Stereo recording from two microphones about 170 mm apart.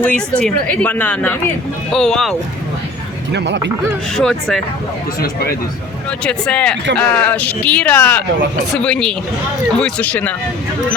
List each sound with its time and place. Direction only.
0.0 s speech: 5° left (ahead or behind)
3.3 s speech: 90° right
4.1 s speech: centre (ahead or behind)
5.2 s speech: 60° left (ahead or behind)
6.2 s speech: 5° left (ahead or behind)